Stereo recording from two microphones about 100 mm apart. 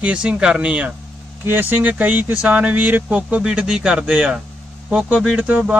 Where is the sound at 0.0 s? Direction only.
10° right (ahead or behind).